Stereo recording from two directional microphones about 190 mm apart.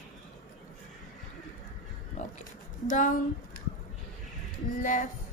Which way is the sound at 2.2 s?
40° left (ahead or behind).